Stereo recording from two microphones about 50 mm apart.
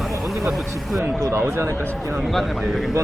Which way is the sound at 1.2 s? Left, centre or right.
Right.